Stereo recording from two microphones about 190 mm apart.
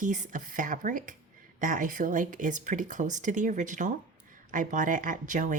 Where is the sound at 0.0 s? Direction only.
45° right (ahead or behind).